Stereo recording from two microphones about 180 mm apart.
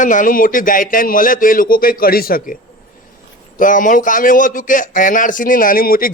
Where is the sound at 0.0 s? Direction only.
45° left (ahead or behind).